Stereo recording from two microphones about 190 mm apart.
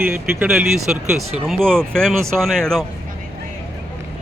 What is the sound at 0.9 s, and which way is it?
Speech, 5° right (ahead or behind).